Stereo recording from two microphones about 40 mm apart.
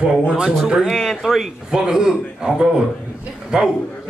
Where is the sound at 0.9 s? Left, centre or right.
Centre.